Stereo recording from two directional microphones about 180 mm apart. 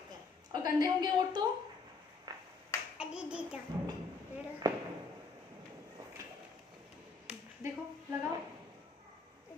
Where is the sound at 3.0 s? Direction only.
5° right (ahead or behind).